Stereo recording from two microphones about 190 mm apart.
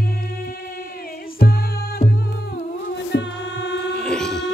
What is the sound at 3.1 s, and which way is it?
Music, 70° left (ahead or behind).